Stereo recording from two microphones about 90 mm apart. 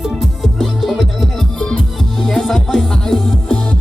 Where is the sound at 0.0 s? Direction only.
Centre (ahead or behind).